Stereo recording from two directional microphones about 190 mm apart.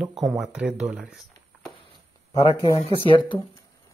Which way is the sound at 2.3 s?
30° left (ahead or behind).